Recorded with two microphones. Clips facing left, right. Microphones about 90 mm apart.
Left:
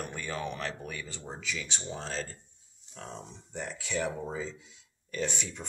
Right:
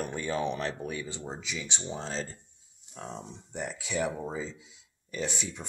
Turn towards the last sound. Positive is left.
turn(degrees=-10)  # may be behind; listen again after turning